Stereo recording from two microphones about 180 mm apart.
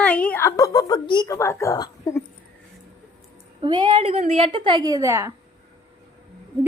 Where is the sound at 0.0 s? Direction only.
5° left (ahead or behind).